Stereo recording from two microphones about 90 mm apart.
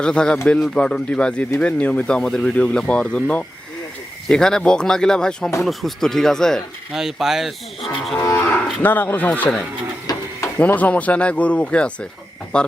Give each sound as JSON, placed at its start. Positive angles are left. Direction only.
{"t": 0.0, "sound": "speech", "side_deg": 10}
{"t": 5.6, "sound": "cattle", "side_deg": 5}
{"t": 6.9, "sound": "cattle", "side_deg": -5}
{"t": 8.8, "sound": "speech", "side_deg": 20}
{"t": 10.1, "sound": "printer", "side_deg": 45}
{"t": 10.6, "sound": "speech", "side_deg": 15}